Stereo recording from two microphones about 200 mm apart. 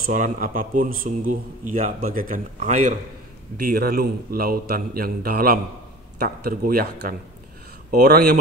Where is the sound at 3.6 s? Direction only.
45° right (ahead or behind).